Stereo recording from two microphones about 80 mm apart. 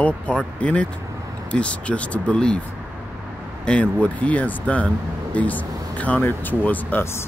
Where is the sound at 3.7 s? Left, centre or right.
Centre.